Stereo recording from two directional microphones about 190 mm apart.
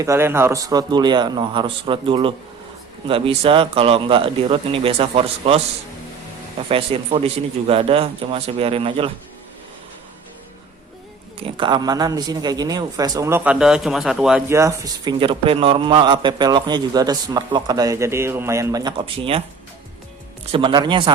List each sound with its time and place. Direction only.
0.0 s a man's voice: 15° right (ahead or behind); by 5.6 s 30° right (ahead or behind)
6.7 s a man's voice: 30° right (ahead or behind)
11.4 s a man's voice: 25° right (ahead or behind); by 14.4 s 5° right (ahead or behind)
14.5 s speech: 15° right (ahead or behind)
15.2 s a man's voice: 30° right (ahead or behind)
20.5 s a man's voice: 25° right (ahead or behind)